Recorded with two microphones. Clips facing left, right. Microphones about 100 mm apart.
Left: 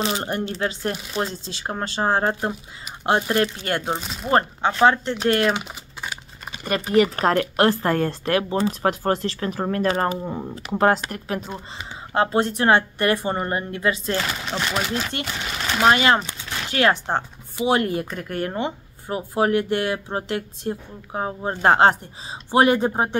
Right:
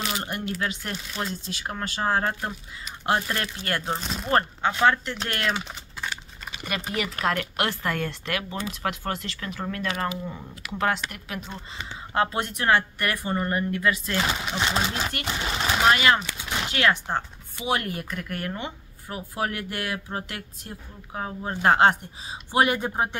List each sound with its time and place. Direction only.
0.0 s speech: 30° left (ahead or behind)
5.3 s typing: 20° left (ahead or behind)
6.5 s speech: 40° left (ahead or behind)
14.1 s speech: 15° right (ahead or behind)
15.2 s a sound: 25° right (ahead or behind)
15.9 s speech: 30° left (ahead or behind)
16.3 s a sound: 20° right (ahead or behind)
16.7 s speech: 30° left (ahead or behind)